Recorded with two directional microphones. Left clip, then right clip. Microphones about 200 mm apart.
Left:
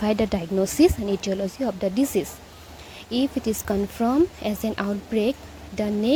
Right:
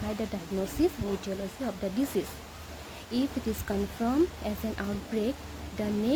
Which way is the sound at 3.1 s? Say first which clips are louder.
Left 7 dB; 35° left (ahead or behind).